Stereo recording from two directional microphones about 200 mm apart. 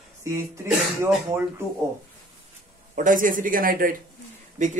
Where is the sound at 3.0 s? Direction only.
40° right (ahead or behind).